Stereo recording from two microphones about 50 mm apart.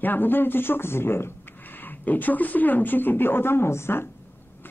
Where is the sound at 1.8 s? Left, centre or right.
Left.